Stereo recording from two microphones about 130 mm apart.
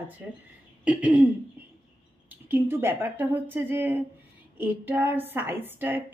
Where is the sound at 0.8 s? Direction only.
10° right (ahead or behind).